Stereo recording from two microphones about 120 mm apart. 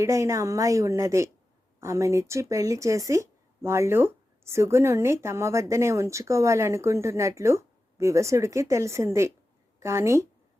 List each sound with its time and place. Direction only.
0.0 s speech: 25° right (ahead or behind)